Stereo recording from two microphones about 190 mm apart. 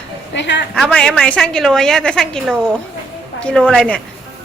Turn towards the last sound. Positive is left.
turn(degrees=5)  # may be behind; listen again after turning